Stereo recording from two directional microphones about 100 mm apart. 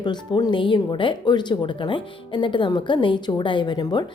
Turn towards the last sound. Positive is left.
turn(degrees=45)  # may be behind; listen again after turning